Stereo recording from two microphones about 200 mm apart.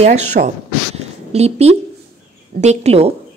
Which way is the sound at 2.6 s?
35° right (ahead or behind).